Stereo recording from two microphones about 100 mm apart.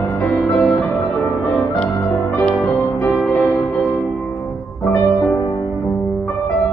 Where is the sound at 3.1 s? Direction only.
10° left (ahead or behind).